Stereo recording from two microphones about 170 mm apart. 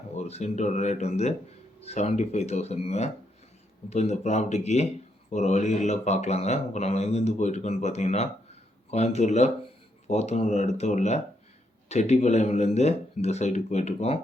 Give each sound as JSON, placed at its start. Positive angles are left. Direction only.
{"t": 0.1, "sound": "speech", "side_deg": 40}